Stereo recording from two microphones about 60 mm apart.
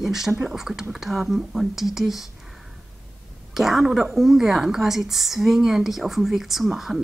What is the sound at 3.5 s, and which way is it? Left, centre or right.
A woman's voice, centre.